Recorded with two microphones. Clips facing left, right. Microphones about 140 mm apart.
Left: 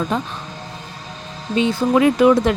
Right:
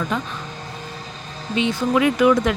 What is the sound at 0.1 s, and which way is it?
Speech, 35° left (ahead or behind).